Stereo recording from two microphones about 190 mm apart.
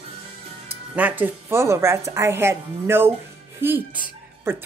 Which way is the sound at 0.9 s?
10° right (ahead or behind).